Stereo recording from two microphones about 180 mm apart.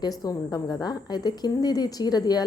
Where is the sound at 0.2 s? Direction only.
20° left (ahead or behind).